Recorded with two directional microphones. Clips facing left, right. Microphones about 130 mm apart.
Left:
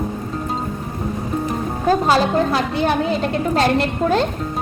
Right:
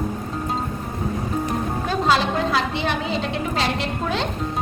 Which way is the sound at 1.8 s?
45° left (ahead or behind).